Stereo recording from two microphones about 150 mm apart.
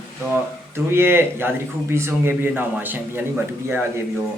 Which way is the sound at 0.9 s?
15° right (ahead or behind).